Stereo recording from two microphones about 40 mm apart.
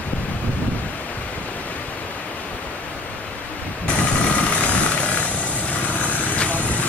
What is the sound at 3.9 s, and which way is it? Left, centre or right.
Vehicle, left.